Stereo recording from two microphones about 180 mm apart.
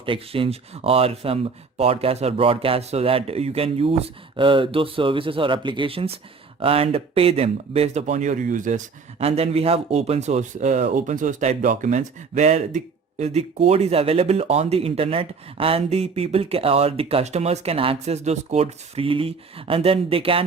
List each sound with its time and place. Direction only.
0.0 s speech: 30° right (ahead or behind); by 8.8 s 45° right (ahead or behind)
9.2 s speech: 35° right (ahead or behind)